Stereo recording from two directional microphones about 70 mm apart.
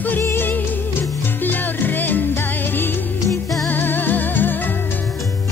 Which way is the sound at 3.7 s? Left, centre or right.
Left.